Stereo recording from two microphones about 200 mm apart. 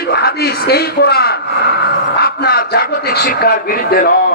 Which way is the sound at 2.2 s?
50° left (ahead or behind).